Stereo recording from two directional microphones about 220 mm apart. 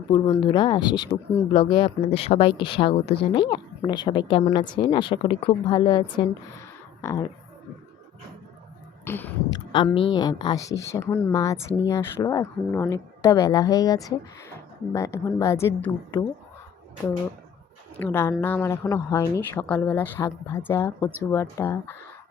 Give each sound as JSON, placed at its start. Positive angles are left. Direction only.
{"t": 0.1, "sound": "speech", "side_deg": 20}
{"t": 9.0, "sound": "a sound", "side_deg": 10}
{"t": 9.7, "sound": "speech", "side_deg": 25}
{"t": 10.9, "sound": "speech", "side_deg": 5}
{"t": 17.9, "sound": "speech", "side_deg": 10}